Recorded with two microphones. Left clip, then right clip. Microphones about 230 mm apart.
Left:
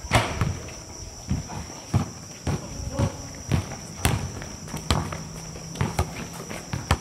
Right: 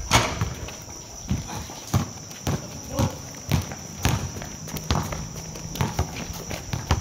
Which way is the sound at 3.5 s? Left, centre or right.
Right.